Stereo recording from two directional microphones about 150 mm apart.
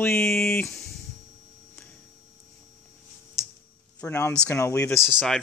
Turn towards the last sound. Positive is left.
turn(degrees=0)  # may be behind; listen again after turning